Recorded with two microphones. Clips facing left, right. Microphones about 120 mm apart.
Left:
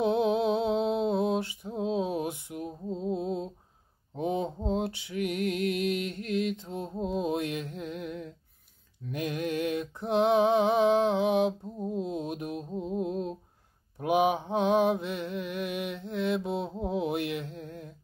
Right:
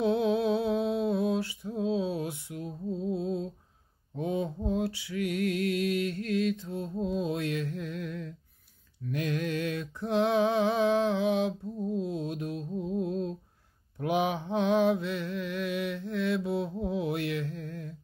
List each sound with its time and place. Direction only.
0.0 s mantra: 15° left (ahead or behind)
4.1 s music: 20° left (ahead or behind)
9.1 s a sound: 15° left (ahead or behind)
13.9 s mantra: 15° left (ahead or behind)